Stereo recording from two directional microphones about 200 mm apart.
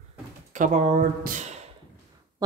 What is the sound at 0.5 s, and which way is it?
Speech, 40° right (ahead or behind).